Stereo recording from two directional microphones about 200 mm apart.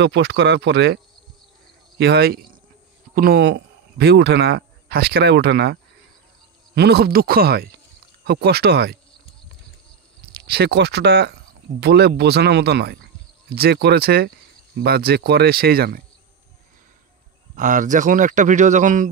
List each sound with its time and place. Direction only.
0.0 s speech: 60° right (ahead or behind)
10.3 s speech: 55° right (ahead or behind)
17.6 s a man's voice: 40° right (ahead or behind)